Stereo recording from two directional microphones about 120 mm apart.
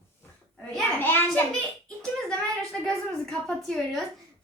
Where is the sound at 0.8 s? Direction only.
15° left (ahead or behind).